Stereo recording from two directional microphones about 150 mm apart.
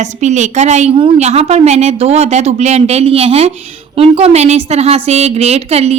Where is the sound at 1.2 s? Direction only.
45° right (ahead or behind).